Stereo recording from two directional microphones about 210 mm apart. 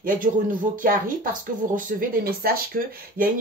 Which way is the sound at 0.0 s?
40° right (ahead or behind).